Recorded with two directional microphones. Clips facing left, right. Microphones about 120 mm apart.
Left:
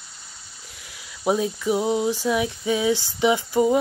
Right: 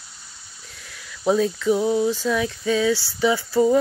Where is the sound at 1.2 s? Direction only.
15° left (ahead or behind).